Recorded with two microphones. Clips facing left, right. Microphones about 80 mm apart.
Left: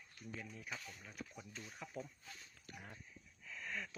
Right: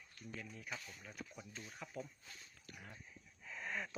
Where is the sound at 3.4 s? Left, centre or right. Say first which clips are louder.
Right 2 dB; right.